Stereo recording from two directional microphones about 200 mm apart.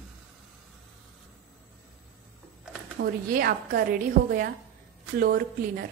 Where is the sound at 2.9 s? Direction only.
50° right (ahead or behind).